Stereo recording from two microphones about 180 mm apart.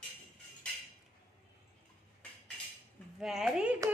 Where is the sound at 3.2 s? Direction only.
5° right (ahead or behind).